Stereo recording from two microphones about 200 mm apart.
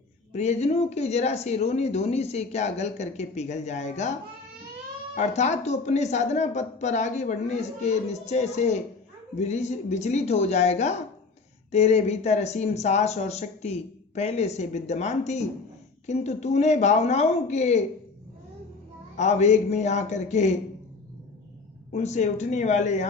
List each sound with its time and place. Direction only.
0.3 s speech: 35° left (ahead or behind)
5.1 s speech: 35° left (ahead or behind)
19.1 s speech: 35° left (ahead or behind)
21.9 s speech: 35° left (ahead or behind)